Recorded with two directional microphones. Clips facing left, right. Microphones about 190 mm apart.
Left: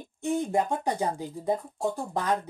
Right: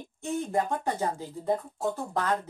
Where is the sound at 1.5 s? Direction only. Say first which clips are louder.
Even; centre (ahead or behind).